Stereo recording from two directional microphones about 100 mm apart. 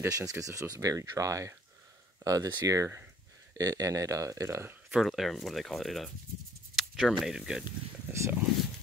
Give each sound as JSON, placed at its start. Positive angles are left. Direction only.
{"t": 0.1, "sound": "speech", "side_deg": -35}
{"t": 4.9, "sound": "speech", "side_deg": 0}
{"t": 8.1, "sound": "speech", "side_deg": -25}